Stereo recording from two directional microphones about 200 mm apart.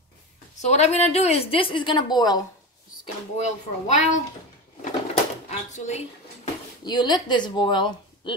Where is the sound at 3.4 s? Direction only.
35° left (ahead or behind).